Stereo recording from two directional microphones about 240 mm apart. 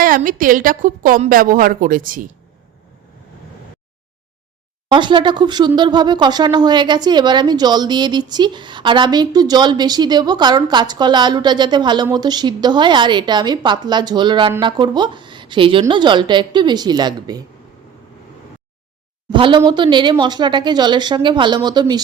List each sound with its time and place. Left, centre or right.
0.0 s a woman's voice: right
4.9 s a woman's voice: centre
19.3 s a woman's voice: centre